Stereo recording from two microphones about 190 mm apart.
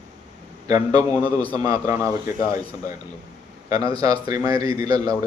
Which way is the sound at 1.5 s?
20° right (ahead or behind).